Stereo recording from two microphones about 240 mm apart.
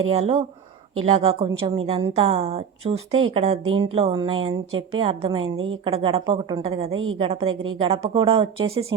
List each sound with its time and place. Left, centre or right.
0.1 s a woman's voice: right
5.5 s a woman's voice: right
5.8 s a woman's voice: right
6.9 s a woman's voice: right
7.2 s a woman's voice: right